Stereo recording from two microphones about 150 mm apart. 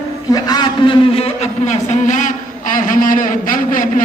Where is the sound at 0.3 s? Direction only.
25° left (ahead or behind).